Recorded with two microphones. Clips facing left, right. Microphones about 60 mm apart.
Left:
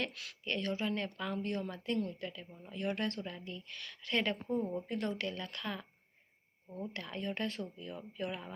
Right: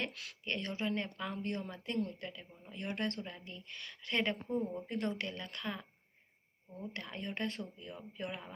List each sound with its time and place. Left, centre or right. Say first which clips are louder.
0.0 s speech: left 1 dB; right
2.8 s speech: left 2 dB; centre
4.4 s a woman's voice: left 1 dB; centre
4.9 s speech: left 1 dB; right
6.9 s speech: left 2 dB; right